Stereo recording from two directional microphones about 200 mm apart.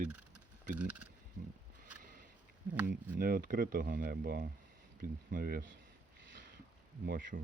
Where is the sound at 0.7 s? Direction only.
5° right (ahead or behind).